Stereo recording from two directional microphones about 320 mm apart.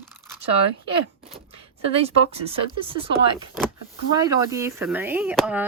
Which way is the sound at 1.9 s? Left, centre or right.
Centre.